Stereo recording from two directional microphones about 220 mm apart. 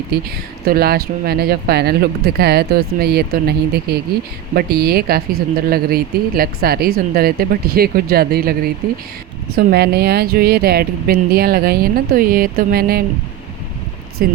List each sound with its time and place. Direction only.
0.1 s speech: 45° right (ahead or behind)
14.2 s speech: 45° right (ahead or behind)